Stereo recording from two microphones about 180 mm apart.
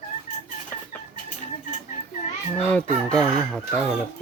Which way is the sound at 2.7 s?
5° left (ahead or behind).